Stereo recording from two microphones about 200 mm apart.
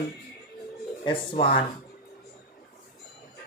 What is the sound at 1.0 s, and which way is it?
Speech, 25° left (ahead or behind).